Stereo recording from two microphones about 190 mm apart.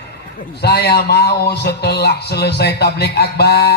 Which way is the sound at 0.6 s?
55° left (ahead or behind).